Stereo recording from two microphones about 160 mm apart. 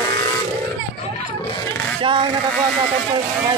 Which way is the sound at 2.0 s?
30° right (ahead or behind).